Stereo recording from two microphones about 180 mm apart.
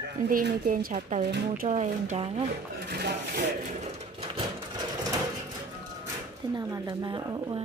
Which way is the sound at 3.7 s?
40° right (ahead or behind).